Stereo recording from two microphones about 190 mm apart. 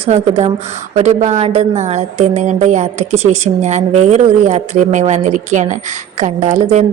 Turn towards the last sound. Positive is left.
turn(degrees=-35)  # may be behind; listen again after turning